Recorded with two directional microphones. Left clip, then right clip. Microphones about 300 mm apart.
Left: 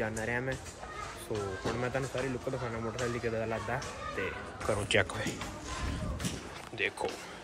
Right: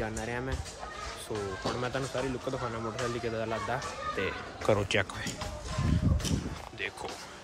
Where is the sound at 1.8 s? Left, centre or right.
Centre.